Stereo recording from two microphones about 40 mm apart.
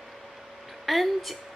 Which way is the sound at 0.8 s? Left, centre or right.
Centre.